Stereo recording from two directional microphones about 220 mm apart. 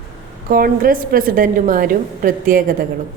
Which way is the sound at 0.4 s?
40° right (ahead or behind).